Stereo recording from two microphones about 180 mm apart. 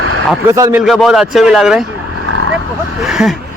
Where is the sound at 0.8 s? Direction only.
Centre (ahead or behind).